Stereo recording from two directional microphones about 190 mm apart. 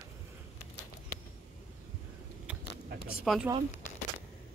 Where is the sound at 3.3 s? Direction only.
Centre (ahead or behind).